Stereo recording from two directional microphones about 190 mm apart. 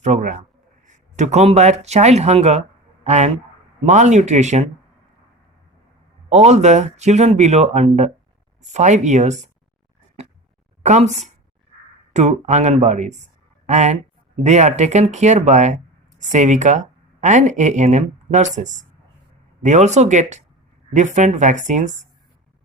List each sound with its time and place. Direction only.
0.0 s speech: 40° right (ahead or behind)
6.2 s speech: 35° right (ahead or behind)
10.8 s speech: 35° right (ahead or behind)
12.1 s speech: 40° right (ahead or behind)